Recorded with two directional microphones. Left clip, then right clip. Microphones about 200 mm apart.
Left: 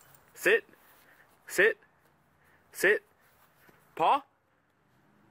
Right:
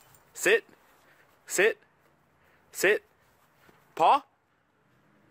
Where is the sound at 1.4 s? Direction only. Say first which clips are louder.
Even; 10° right (ahead or behind).